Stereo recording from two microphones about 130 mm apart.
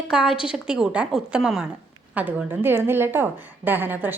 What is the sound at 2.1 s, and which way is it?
A woman's voice, 15° right (ahead or behind).